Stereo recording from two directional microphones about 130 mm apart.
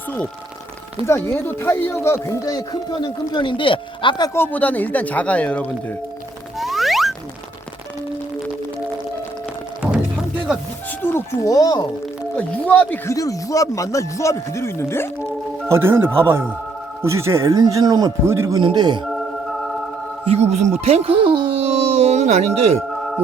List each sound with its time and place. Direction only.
1.0 s speech: 20° left (ahead or behind); by 4.3 s 40° left (ahead or behind)
4.4 s speech: 10° left (ahead or behind)
6.6 s music: centre (ahead or behind)
11.0 s speech: 20° left (ahead or behind)
12.4 s speech: 10° left (ahead or behind)
13.1 s speech: 25° left (ahead or behind)
15.7 s speech: 20° right (ahead or behind)
18.6 s speech: 35° right (ahead or behind)
20.3 s speech: 55° right (ahead or behind)